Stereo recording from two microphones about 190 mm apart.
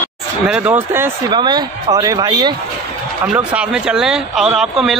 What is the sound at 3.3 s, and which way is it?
Speech, 5° right (ahead or behind).